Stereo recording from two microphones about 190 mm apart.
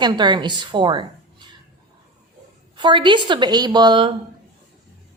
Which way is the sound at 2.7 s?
25° right (ahead or behind).